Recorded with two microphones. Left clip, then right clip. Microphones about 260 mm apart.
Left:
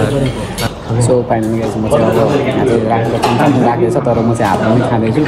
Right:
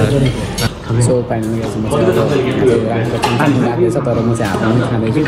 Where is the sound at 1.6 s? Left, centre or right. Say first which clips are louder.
Even; centre.